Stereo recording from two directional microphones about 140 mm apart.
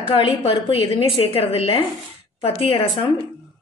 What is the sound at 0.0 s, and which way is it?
A woman's voice, 40° left (ahead or behind).